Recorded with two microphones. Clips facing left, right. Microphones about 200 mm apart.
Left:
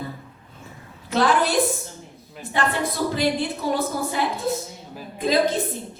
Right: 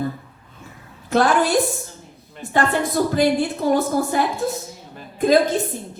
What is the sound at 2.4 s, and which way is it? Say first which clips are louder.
Speech: right 2 dB; 5° left (ahead or behind).